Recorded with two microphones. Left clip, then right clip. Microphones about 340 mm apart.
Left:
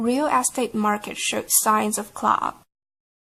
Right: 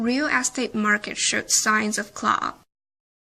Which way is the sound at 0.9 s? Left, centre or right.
Centre.